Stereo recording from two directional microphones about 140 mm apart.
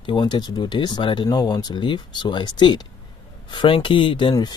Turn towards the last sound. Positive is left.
turn(degrees=30)  # may be behind; listen again after turning